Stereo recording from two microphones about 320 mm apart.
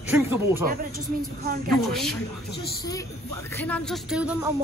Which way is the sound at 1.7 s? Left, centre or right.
Centre.